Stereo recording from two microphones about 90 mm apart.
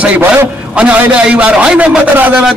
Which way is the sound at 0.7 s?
15° right (ahead or behind).